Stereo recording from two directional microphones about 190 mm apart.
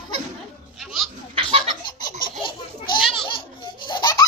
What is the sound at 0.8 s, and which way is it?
Goat, centre (ahead or behind).